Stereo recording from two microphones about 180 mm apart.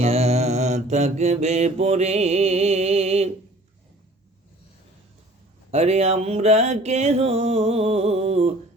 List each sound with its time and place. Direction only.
0.0 s mantra: 35° right (ahead or behind)
5.7 s music: 35° right (ahead or behind)